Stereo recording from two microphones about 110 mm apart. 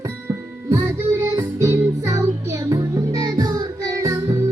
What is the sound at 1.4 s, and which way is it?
Music, 30° right (ahead or behind).